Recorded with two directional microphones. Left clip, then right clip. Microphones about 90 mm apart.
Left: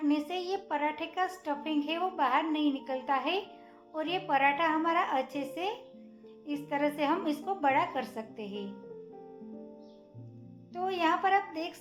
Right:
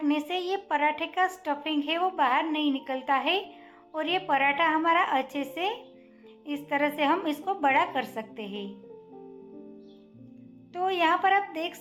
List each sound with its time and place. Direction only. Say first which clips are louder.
0.0 s a child's voice: right 3 dB; 45° right (ahead or behind)
10.8 s a child's voice: right 5 dB; 55° right (ahead or behind)